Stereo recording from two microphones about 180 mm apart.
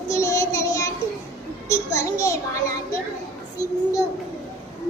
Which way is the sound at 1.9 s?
15° left (ahead or behind).